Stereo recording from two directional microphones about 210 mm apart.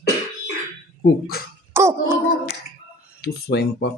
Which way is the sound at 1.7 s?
10° right (ahead or behind).